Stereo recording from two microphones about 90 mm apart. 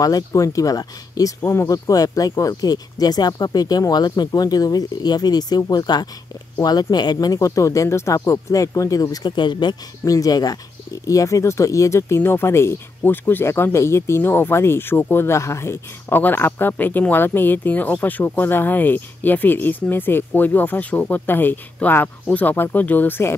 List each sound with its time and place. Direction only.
0.0 s speech: 40° left (ahead or behind)
7.3 s speech: 35° left (ahead or behind); by 9.8 s 55° left (ahead or behind)
10.0 s speech: 40° left (ahead or behind); by 23.3 s 25° left (ahead or behind)